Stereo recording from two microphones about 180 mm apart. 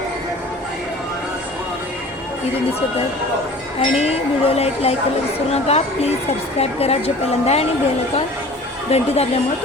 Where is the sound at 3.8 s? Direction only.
35° left (ahead or behind).